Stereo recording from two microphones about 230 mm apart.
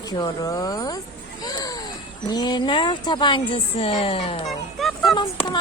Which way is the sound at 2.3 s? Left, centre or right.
Centre.